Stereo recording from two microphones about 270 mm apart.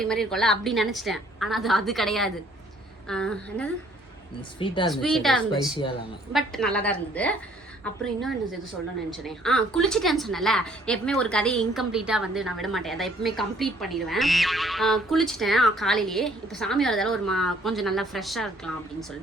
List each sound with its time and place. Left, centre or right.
0.0 s a woman's voice: centre
4.6 s speech: centre
4.9 s a woman's voice: centre
9.1 s a woman's voice: centre